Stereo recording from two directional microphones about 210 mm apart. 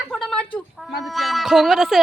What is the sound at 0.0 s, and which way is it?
Speech, centre (ahead or behind).